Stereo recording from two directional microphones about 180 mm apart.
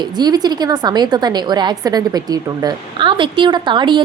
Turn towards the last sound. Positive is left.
turn(degrees=-25)  # may be behind; listen again after turning